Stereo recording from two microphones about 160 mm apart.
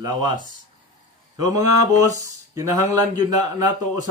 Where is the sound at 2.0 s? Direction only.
20° right (ahead or behind).